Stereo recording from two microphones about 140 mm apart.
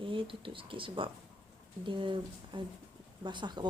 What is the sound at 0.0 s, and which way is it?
Speech, 35° right (ahead or behind).